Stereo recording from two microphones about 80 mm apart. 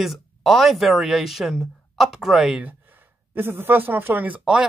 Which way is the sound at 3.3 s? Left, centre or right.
Right.